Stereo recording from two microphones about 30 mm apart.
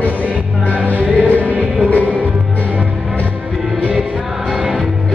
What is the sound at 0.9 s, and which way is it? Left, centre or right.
Music, right.